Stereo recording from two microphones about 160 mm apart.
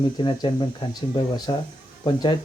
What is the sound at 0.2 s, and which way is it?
Speech, 30° left (ahead or behind).